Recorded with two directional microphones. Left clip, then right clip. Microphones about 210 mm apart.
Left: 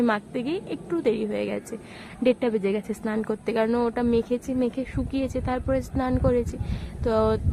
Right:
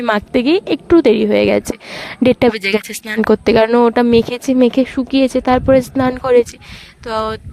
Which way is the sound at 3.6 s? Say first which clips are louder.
Right 13 dB; 35° right (ahead or behind).